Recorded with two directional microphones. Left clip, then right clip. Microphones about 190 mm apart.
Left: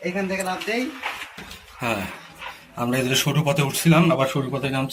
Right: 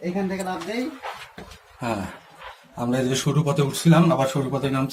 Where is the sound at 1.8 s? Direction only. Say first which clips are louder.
Left 2 dB; centre (ahead or behind).